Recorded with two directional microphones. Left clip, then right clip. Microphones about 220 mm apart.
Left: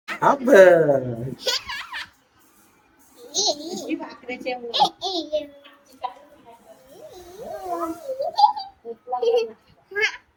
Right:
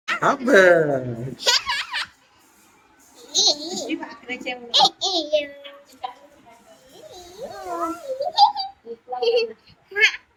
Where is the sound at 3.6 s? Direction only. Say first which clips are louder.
Right 3 dB; 5° left (ahead or behind).